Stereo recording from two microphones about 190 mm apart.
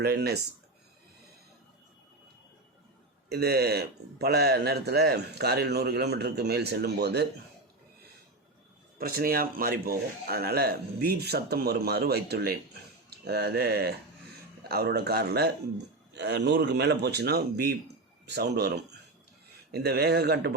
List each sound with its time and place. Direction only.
0.0 s speech: 55° right (ahead or behind)
3.2 s speech: 55° right (ahead or behind)
9.0 s speech: 50° right (ahead or behind)